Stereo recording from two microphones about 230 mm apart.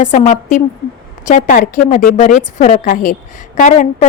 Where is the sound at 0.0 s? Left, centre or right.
Left.